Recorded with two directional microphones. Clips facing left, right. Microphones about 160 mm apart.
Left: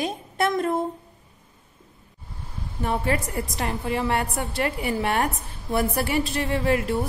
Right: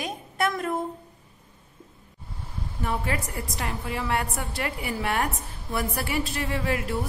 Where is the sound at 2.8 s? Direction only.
30° left (ahead or behind).